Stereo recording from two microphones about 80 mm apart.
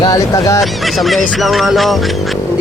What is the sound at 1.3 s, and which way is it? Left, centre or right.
Music, centre.